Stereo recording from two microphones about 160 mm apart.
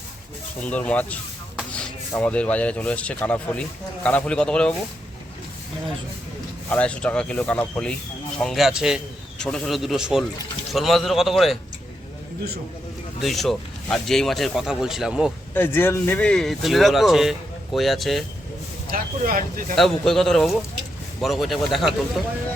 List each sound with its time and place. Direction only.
0.6 s speech: 10° left (ahead or behind)
6.7 s speech: 5° left (ahead or behind)
13.2 s speech: centre (ahead or behind)
15.5 s speech: 15° left (ahead or behind)
18.9 s speech: 65° right (ahead or behind)
19.7 s speech: centre (ahead or behind)